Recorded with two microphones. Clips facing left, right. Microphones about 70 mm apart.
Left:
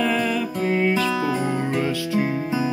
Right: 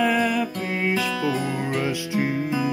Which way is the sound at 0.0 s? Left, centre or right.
Centre.